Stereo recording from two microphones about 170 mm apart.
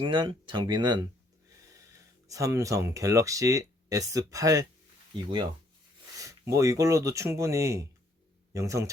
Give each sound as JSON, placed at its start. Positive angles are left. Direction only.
{"t": 0.0, "sound": "speech", "side_deg": -30}
{"t": 2.2, "sound": "speech", "side_deg": -20}
{"t": 6.1, "sound": "speech", "side_deg": -20}